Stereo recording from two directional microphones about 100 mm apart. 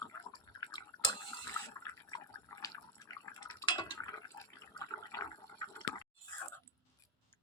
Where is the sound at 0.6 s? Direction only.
45° left (ahead or behind).